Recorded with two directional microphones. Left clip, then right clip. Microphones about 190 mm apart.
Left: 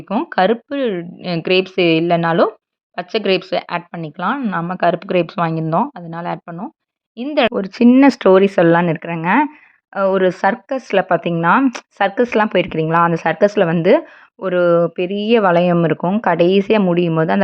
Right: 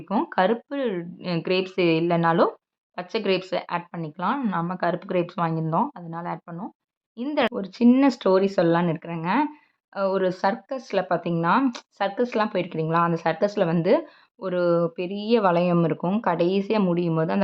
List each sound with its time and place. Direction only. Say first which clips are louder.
0.3 s speech: left 9 dB; 25° left (ahead or behind)